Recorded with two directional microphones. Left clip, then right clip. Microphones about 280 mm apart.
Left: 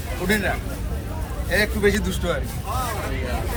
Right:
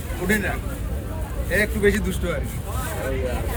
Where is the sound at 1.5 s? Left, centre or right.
Centre.